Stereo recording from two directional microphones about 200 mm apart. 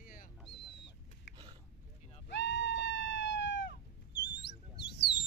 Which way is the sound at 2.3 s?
60° left (ahead or behind).